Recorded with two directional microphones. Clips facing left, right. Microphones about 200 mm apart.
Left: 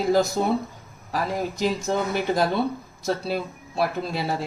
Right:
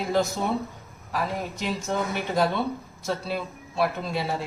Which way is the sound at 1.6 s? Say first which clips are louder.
Left 6 dB; 35° left (ahead or behind).